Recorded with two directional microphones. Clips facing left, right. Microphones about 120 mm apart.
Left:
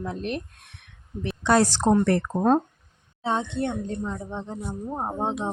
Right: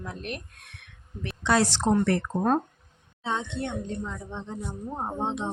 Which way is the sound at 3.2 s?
40° left (ahead or behind).